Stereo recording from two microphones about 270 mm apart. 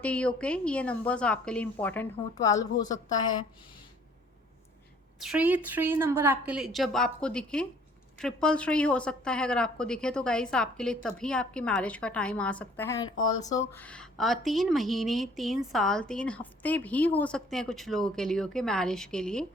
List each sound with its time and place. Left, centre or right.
0.0 s a woman's voice: centre
5.2 s a woman's voice: centre